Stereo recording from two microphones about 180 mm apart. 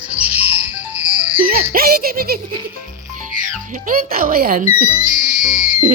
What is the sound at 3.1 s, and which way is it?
Speech, 45° right (ahead or behind).